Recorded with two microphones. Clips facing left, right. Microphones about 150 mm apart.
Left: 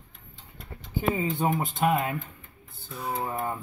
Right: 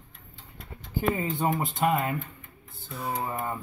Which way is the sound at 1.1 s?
Centre (ahead or behind).